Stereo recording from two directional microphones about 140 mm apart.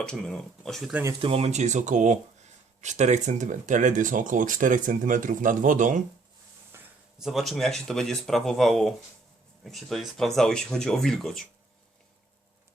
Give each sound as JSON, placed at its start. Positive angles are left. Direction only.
{"t": 0.0, "sound": "speech", "side_deg": 5}
{"t": 1.2, "sound": "speech", "side_deg": -45}
{"t": 6.7, "sound": "a sound", "side_deg": -15}
{"t": 7.2, "sound": "speech", "side_deg": 0}